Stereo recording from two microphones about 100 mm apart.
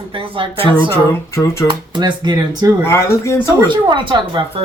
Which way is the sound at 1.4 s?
15° left (ahead or behind).